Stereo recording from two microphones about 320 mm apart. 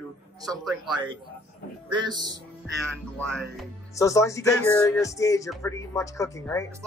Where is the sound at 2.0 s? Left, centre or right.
Centre.